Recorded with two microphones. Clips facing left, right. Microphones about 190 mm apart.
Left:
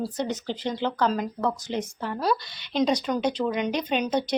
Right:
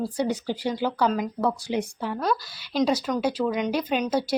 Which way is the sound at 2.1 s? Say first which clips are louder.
Left 1 dB; centre (ahead or behind).